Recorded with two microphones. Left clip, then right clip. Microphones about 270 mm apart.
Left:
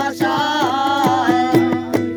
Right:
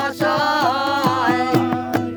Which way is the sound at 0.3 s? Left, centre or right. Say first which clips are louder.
Right 1 dB; right.